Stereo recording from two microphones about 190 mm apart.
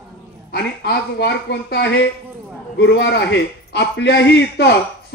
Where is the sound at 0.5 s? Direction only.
60° left (ahead or behind).